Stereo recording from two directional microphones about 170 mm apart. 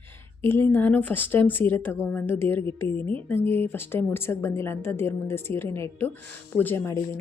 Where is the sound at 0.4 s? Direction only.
15° left (ahead or behind).